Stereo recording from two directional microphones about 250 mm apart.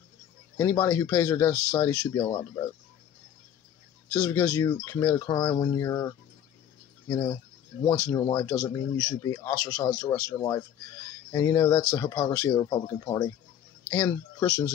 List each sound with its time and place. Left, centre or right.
0.6 s speech: centre
4.1 s speech: centre